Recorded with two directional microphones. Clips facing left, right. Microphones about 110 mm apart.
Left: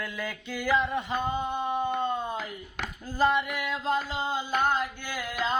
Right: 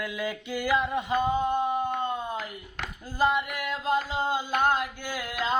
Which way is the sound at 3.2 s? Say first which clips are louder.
Even; 5° right (ahead or behind).